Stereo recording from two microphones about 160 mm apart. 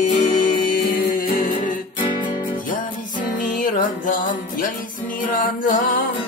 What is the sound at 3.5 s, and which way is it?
Music, 55° left (ahead or behind).